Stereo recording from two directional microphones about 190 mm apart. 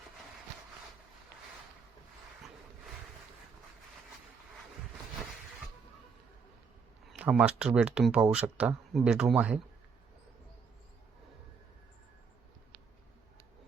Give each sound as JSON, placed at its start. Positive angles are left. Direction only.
{"t": 7.1, "sound": "speech", "side_deg": -5}